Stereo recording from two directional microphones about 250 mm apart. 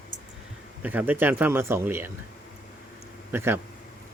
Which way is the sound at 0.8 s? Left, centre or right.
Centre.